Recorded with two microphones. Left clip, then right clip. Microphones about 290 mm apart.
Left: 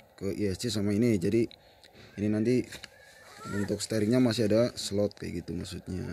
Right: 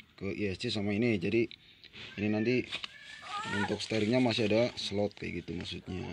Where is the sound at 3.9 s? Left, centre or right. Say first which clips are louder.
Left 3 dB; centre.